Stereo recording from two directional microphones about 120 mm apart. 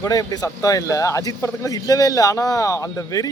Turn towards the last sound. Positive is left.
turn(degrees=25)  # may be behind; listen again after turning